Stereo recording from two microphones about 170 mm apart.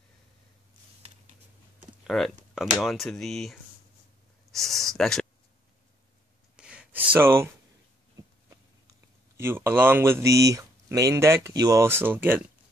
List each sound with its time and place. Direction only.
2.0 s speech: centre (ahead or behind)
4.5 s a sound: centre (ahead or behind)
6.5 s gasp: 5° right (ahead or behind)
9.4 s speech: 15° right (ahead or behind)